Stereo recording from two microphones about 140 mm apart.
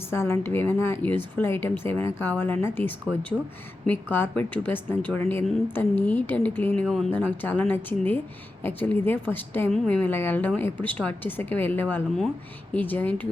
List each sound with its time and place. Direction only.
0.1 s speech: 15° left (ahead or behind)
6.8 s speech: centre (ahead or behind)
7.1 s speech: 10° left (ahead or behind)